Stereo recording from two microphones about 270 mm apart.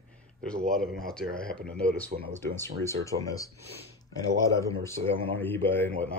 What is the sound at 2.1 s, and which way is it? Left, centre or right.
Speech, right.